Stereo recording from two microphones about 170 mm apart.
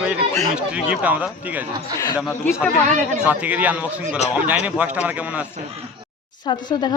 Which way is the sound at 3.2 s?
10° right (ahead or behind).